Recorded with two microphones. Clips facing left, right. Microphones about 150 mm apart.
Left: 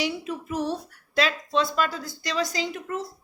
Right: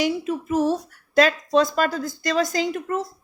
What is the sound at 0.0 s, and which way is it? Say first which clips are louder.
Speech: right 6 dB; 45° right (ahead or behind).